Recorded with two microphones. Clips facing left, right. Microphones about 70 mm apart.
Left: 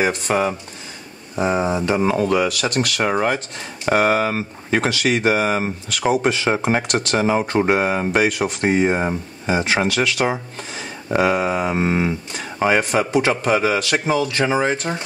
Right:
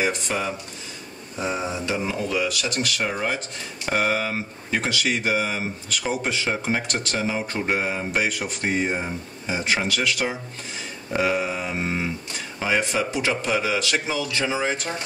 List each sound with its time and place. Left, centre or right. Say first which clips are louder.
0.0 s speech: left 6 dB; left
1.7 s a man's voice: left 8 dB; left